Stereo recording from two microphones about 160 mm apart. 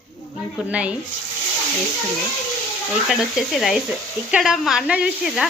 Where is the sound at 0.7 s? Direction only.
10° right (ahead or behind).